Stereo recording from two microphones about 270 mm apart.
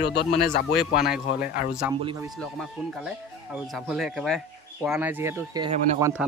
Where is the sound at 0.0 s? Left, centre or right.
Left.